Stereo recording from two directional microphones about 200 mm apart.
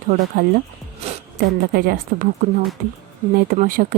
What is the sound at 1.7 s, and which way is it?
A woman's voice, 50° right (ahead or behind).